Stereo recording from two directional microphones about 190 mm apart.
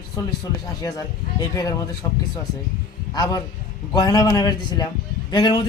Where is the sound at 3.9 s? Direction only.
20° left (ahead or behind).